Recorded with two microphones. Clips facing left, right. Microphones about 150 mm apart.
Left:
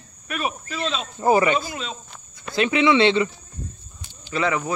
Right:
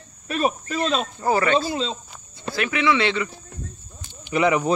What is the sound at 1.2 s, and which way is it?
Speech, 15° left (ahead or behind).